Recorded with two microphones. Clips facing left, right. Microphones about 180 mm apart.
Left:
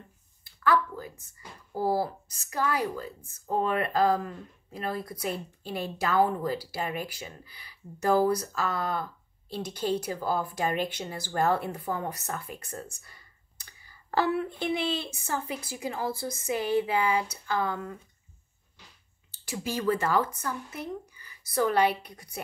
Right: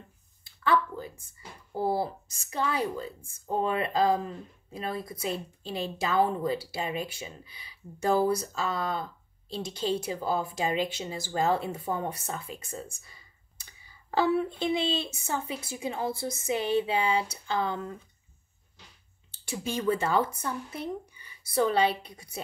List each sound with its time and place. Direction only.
0.4 s a woman's voice: 25° right (ahead or behind)
12.5 s speech: 10° right (ahead or behind)
13.7 s a sound: 15° right (ahead or behind)
14.6 s a woman's voice: 20° right (ahead or behind)
19.4 s speech: 25° right (ahead or behind)